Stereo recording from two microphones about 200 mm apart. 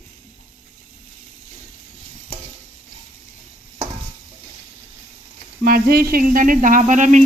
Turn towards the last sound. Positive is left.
turn(degrees=-40)  # may be behind; listen again after turning